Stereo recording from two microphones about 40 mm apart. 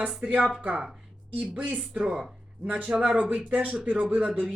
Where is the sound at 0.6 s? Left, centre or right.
Right.